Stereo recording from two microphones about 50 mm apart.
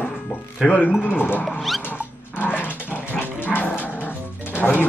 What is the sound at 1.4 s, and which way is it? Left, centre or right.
Speech, centre.